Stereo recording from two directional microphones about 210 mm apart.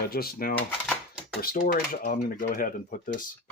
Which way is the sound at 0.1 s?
45° left (ahead or behind).